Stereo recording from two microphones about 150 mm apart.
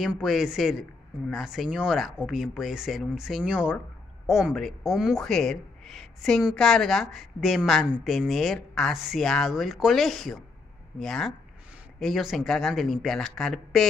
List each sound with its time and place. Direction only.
0.0 s speech: 5° right (ahead or behind)